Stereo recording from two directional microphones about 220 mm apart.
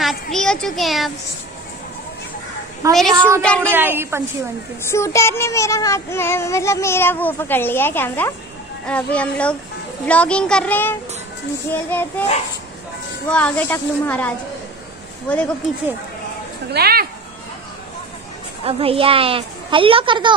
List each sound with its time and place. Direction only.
0.0 s a sound: centre (ahead or behind)
2.9 s a child's voice: centre (ahead or behind)
3.7 s a woman's voice: 10° right (ahead or behind)
4.9 s child singing: 10° left (ahead or behind)
8.8 s a child's voice: 5° left (ahead or behind)
11.7 s child singing: 10° left (ahead or behind)
13.3 s child singing: 5° left (ahead or behind)
16.7 s speech: 45° right (ahead or behind)
18.7 s a woman's voice: 25° right (ahead or behind)